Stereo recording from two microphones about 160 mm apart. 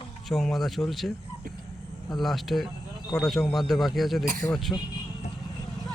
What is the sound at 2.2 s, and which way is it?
Speech, centre (ahead or behind).